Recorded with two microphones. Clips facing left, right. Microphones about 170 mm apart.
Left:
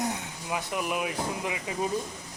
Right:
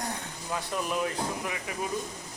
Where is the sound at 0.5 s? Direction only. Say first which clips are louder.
Left 1 dB; 15° left (ahead or behind).